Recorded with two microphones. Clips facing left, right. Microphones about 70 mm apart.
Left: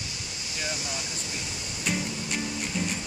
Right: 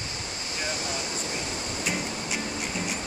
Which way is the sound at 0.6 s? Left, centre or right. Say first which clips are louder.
Right 2 dB; right.